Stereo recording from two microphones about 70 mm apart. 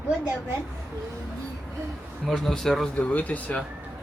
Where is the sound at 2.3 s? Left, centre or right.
Centre.